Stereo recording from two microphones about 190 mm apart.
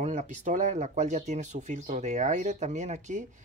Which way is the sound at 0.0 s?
40° right (ahead or behind).